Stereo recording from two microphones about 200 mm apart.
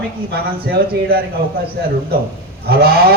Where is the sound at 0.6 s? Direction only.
50° right (ahead or behind).